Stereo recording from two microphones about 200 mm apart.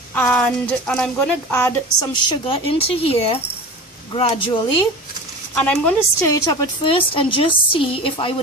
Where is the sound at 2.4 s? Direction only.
30° left (ahead or behind).